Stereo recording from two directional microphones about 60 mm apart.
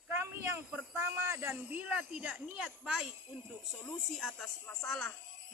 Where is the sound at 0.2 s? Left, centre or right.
Right.